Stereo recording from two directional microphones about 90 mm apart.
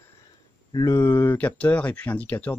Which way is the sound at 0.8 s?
30° left (ahead or behind).